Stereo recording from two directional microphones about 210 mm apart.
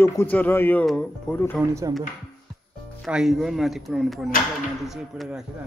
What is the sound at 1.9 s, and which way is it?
Speech, 20° right (ahead or behind).